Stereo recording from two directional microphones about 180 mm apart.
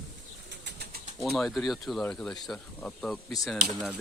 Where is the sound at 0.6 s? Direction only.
65° right (ahead or behind).